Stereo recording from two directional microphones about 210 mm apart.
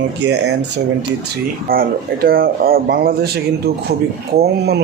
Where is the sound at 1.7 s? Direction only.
45° right (ahead or behind).